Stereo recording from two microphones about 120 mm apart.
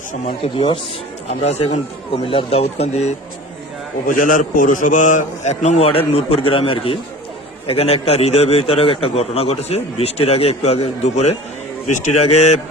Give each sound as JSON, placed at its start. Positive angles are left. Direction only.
{"t": 0.1, "sound": "speech", "side_deg": 60}
{"t": 1.3, "sound": "a man's voice", "side_deg": 65}
{"t": 2.2, "sound": "a man's voice", "side_deg": 55}
{"t": 4.1, "sound": "a man's voice", "side_deg": 90}
{"t": 11.9, "sound": "a man's voice", "side_deg": 90}